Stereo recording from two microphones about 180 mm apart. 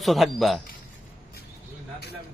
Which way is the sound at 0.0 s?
Centre (ahead or behind).